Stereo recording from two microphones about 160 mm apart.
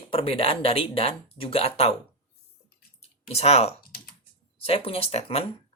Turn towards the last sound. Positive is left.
turn(degrees=40)  # may be behind; listen again after turning